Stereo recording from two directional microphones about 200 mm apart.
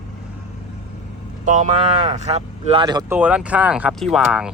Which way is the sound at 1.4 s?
40° right (ahead or behind).